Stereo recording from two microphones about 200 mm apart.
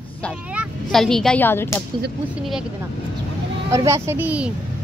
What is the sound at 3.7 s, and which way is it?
Speech, 15° right (ahead or behind).